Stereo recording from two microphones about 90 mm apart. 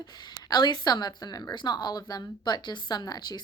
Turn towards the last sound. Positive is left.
turn(degrees=50)  # may be behind; listen again after turning